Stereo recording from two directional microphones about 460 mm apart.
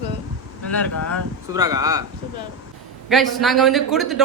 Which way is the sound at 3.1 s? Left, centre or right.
Centre.